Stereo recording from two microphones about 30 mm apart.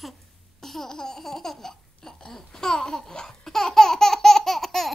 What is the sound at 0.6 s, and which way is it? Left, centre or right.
Laughter, centre.